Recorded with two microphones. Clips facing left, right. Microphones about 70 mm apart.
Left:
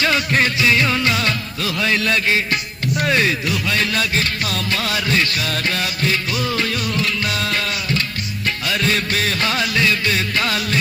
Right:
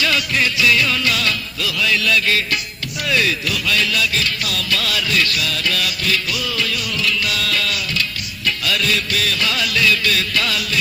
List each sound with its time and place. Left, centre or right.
0.0 s music: left
8.4 s music of bollywood: left